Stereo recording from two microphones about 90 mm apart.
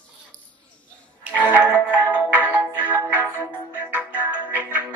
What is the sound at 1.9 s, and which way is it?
Music, 15° right (ahead or behind).